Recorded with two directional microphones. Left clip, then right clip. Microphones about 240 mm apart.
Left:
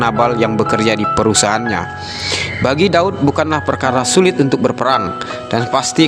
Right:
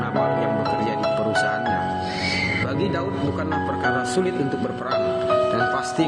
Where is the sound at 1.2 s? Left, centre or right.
Left.